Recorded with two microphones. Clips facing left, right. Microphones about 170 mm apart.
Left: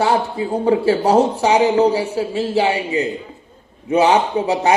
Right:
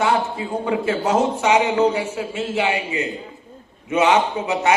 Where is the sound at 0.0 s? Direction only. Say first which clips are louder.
Left 3 dB; 35° left (ahead or behind).